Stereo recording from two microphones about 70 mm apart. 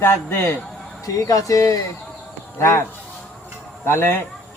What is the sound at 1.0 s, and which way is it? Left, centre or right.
Speech, left.